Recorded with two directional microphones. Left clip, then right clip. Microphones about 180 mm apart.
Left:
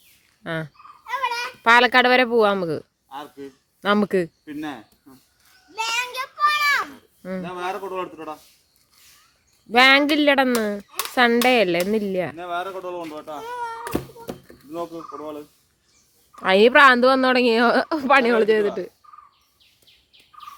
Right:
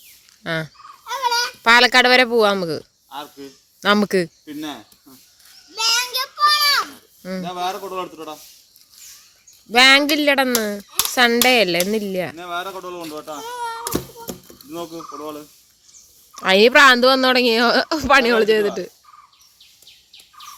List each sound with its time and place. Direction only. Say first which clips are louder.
0.4 s speech: right 4 dB; 5° right (ahead or behind)
1.0 s babbling: right 5 dB; 25° left (ahead or behind)
1.6 s speech: right 2 dB; centre (ahead or behind)
5.8 s a sound: right 5 dB; 15° left (ahead or behind)
7.4 s speech: right 4 dB; 10° right (ahead or behind)
9.7 s speech: right 2 dB; centre (ahead or behind)
12.4 s speech: right 1 dB; 45° right (ahead or behind)
13.4 s a sound: right 2 dB; centre (ahead or behind)
13.8 s a sound: right 2 dB; 40° right (ahead or behind)
16.3 s speech: right 2 dB; centre (ahead or behind)